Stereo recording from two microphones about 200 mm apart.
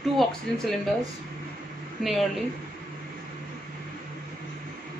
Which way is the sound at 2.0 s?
Centre (ahead or behind).